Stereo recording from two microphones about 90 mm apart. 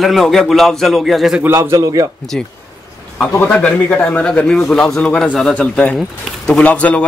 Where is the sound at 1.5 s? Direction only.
40° right (ahead or behind).